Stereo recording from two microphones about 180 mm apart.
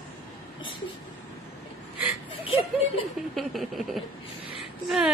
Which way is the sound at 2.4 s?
35° left (ahead or behind).